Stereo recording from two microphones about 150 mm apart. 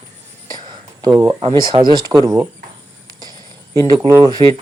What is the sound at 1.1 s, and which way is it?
Speech, 20° right (ahead or behind).